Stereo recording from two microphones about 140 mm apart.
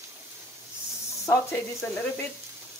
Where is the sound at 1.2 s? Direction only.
20° left (ahead or behind).